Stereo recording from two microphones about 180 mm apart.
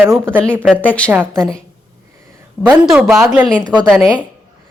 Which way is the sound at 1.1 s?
10° right (ahead or behind).